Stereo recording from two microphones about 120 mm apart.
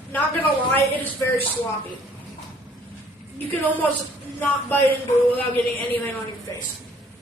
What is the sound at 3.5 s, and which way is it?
A man's voice, 15° left (ahead or behind).